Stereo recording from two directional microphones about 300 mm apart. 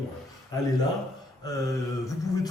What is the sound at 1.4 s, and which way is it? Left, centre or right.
A man's voice, centre.